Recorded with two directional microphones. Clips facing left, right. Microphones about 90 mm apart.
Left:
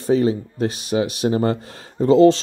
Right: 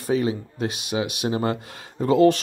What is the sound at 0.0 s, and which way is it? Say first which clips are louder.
Speech: left 5 dB; 35° left (ahead or behind).